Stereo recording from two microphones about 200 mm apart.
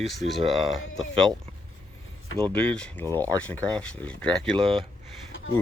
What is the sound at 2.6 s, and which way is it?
Speech, 5° left (ahead or behind).